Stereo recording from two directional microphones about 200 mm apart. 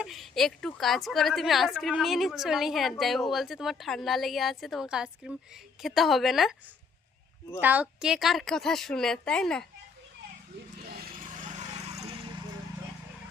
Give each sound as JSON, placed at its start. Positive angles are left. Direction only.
{"t": 0.0, "sound": "a woman's voice", "side_deg": 0}
{"t": 7.6, "sound": "a woman's voice", "side_deg": -10}
{"t": 10.8, "sound": "a sound", "side_deg": -45}